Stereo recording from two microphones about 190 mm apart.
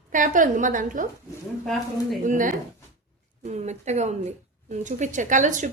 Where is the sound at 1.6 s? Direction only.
Centre (ahead or behind).